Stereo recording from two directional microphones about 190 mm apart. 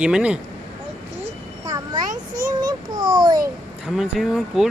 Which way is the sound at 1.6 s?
20° right (ahead or behind).